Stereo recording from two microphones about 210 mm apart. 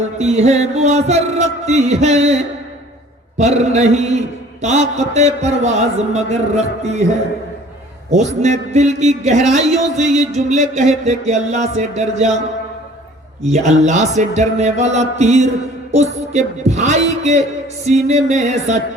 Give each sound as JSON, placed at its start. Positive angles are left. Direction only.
{"t": 0.2, "sound": "a man's voice", "side_deg": -30}
{"t": 8.1, "sound": "a man's voice", "side_deg": -35}
{"t": 13.5, "sound": "a man's voice", "side_deg": -30}